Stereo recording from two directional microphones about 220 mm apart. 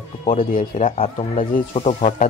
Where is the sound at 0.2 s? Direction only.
35° left (ahead or behind).